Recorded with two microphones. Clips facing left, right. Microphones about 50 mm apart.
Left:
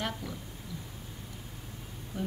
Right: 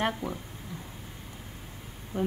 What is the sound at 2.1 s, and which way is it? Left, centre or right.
Speech, right.